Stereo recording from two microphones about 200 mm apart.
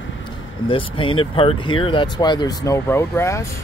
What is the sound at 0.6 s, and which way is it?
Speech, 25° left (ahead or behind).